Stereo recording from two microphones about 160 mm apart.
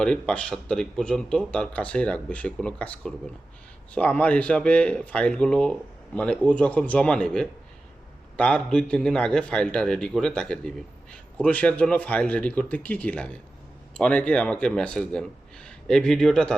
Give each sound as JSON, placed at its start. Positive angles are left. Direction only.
{"t": 0.0, "sound": "a man's voice", "side_deg": 5}